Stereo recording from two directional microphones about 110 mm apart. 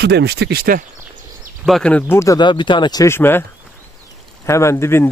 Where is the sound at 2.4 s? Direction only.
45° left (ahead or behind).